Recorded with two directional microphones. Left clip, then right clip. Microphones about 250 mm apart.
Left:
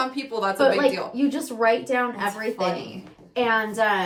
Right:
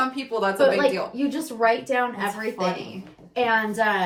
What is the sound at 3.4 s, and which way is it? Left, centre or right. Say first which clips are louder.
Speech: even; centre.